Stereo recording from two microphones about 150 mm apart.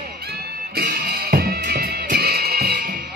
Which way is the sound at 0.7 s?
90° right.